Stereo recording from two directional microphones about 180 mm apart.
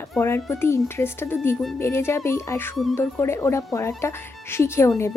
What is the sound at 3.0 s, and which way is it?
A woman's voice, 15° left (ahead or behind).